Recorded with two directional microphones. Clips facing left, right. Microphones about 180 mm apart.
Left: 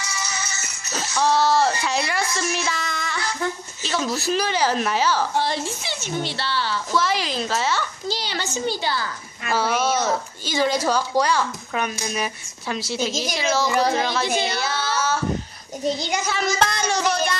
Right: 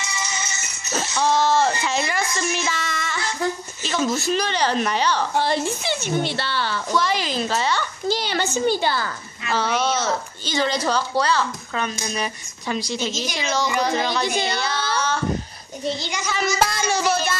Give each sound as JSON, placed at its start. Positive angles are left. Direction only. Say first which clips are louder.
{"t": 0.0, "sound": "music", "louder": "right 1 dB", "side_deg": -20}
{"t": 1.1, "sound": "speech", "louder": "even", "side_deg": 0}
{"t": 5.4, "sound": "a woman's voice", "louder": "right 3 dB", "side_deg": -55}
{"t": 6.9, "sound": "speech", "louder": "right 1 dB", "side_deg": 0}
{"t": 8.1, "sound": "a woman's voice", "louder": "right 7 dB", "side_deg": -55}
{"t": 9.5, "sound": "a child's voice", "louder": "left 1 dB", "side_deg": 10}
{"t": 16.3, "sound": "speech", "louder": "right 2 dB", "side_deg": -5}